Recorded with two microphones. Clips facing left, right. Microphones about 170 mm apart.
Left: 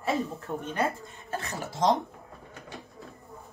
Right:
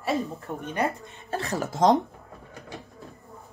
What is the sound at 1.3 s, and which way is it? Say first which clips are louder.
Speech: right 6 dB; 35° right (ahead or behind).